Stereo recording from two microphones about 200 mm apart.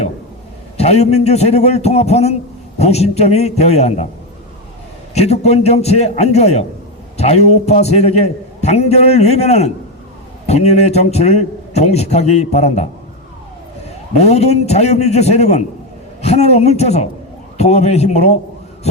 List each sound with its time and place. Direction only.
0.8 s a man's voice: 30° left (ahead or behind)
5.1 s a man's voice: 30° left (ahead or behind)
14.2 s a man's voice: 35° left (ahead or behind)